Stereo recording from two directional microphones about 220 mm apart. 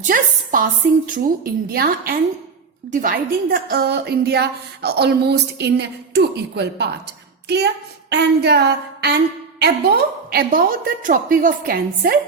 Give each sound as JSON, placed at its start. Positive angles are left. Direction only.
{"t": 0.0, "sound": "speech", "side_deg": -40}
{"t": 1.7, "sound": "a woman's voice", "side_deg": -45}